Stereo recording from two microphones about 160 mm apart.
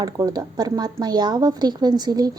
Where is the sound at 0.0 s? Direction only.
25° right (ahead or behind).